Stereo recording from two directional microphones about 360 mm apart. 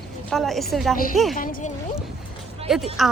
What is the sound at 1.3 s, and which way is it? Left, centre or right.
Speech, left.